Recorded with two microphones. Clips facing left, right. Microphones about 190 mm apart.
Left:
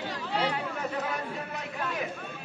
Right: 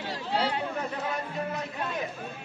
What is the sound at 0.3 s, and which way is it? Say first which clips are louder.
Chatter: right 1 dB; 30° right (ahead or behind).